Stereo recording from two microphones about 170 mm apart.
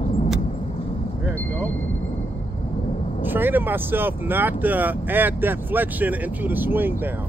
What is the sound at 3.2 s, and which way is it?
Speech, 10° right (ahead or behind).